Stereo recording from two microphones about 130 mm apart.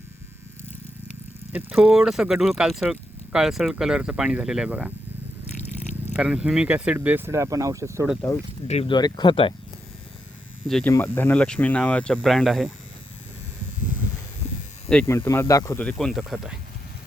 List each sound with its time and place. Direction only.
1.5 s speech: 10° right (ahead or behind)
6.1 s speech: 10° right (ahead or behind)
8.6 s speech: 55° left (ahead or behind)
8.9 s speech: 35° left (ahead or behind)
10.8 s speech: 15° left (ahead or behind); by 12.7 s centre (ahead or behind)
15.0 s speech: 20° left (ahead or behind)
15.8 s speech: 5° left (ahead or behind)